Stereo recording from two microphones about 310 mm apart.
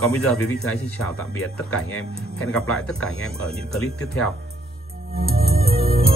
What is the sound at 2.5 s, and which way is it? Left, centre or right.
Speech, centre.